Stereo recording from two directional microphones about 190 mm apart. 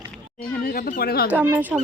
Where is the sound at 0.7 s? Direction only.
45° left (ahead or behind).